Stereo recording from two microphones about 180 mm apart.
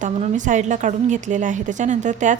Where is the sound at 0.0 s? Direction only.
45° right (ahead or behind).